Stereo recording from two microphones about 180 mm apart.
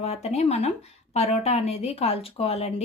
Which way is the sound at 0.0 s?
35° left (ahead or behind).